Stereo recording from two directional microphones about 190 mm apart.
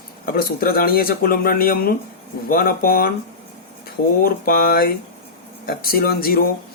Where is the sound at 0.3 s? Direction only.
50° left (ahead or behind).